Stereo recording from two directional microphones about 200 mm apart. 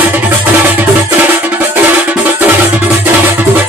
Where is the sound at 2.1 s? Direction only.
10° right (ahead or behind).